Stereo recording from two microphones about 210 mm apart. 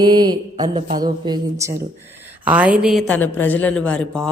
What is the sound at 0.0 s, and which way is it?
Mantra, 20° right (ahead or behind).